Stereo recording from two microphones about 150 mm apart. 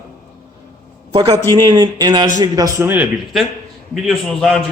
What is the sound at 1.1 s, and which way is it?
A man's voice, 30° right (ahead or behind).